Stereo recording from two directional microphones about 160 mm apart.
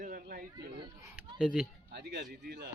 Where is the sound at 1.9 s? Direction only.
90° right.